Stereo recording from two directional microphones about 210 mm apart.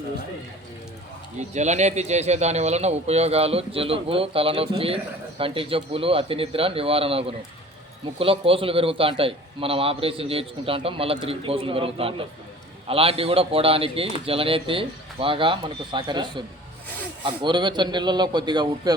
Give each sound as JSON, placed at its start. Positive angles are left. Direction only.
{"t": 1.4, "sound": "a man's voice", "side_deg": -35}